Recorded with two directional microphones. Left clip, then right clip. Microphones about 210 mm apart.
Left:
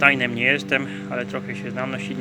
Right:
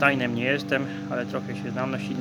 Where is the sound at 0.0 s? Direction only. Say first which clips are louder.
Left 5 dB; 15° right (ahead or behind).